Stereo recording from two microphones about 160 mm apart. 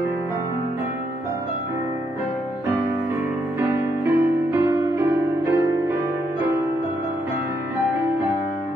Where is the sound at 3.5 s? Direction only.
15° right (ahead or behind).